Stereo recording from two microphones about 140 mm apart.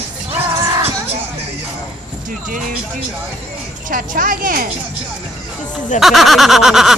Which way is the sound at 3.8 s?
75° right (ahead or behind).